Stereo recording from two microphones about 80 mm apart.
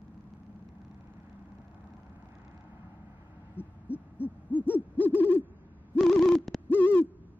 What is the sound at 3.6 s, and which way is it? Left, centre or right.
Hoot, left.